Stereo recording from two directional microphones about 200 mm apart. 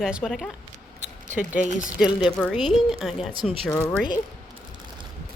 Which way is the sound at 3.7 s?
15° left (ahead or behind).